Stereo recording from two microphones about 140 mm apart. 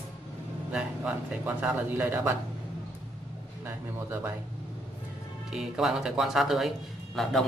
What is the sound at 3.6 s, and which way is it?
Speech, 15° right (ahead or behind).